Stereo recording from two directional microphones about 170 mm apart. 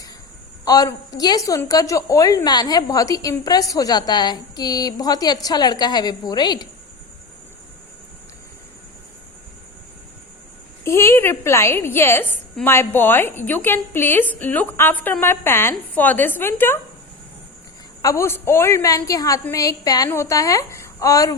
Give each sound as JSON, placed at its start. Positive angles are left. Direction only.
{"t": 0.6, "sound": "a woman's voice", "side_deg": 20}
{"t": 10.8, "sound": "a woman's voice", "side_deg": 15}
{"t": 18.0, "sound": "a woman's voice", "side_deg": 15}